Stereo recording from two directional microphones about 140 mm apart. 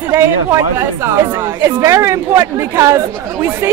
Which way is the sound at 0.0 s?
15° right (ahead or behind).